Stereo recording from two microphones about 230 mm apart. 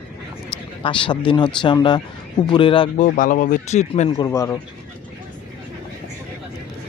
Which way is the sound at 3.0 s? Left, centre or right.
Left.